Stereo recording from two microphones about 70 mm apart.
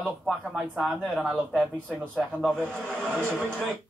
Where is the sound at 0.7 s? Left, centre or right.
Centre.